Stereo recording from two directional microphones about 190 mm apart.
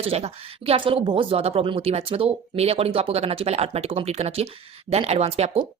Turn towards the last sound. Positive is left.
turn(degrees=-30)  # may be behind; listen again after turning